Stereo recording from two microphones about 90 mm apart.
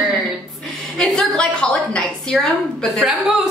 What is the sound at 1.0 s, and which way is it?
A woman's voice, 5° left (ahead or behind).